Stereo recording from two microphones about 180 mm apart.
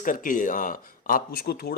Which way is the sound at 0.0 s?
50° left (ahead or behind).